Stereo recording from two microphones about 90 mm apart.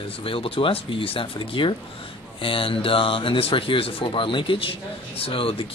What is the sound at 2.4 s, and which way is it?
Speech, 80° left.